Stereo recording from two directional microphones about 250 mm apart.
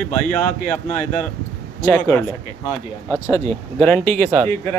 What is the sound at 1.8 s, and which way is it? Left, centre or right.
Speech, centre.